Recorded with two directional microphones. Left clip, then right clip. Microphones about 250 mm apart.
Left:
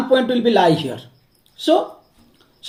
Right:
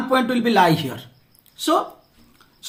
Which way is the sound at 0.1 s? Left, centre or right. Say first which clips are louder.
Left 3 dB; right.